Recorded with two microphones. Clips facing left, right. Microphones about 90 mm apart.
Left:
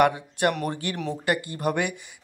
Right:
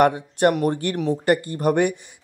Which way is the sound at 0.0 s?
40° right (ahead or behind).